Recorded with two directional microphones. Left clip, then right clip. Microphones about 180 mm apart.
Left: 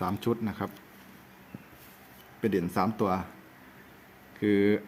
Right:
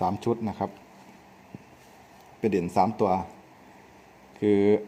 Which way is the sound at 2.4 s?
20° right (ahead or behind).